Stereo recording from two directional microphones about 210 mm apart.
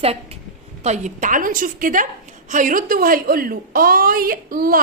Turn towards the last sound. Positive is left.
turn(degrees=-40)  # may be behind; listen again after turning